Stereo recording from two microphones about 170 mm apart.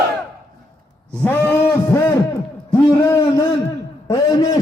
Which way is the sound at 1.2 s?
10° left (ahead or behind).